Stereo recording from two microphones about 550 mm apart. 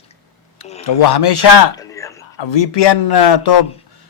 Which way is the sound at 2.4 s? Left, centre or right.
Left.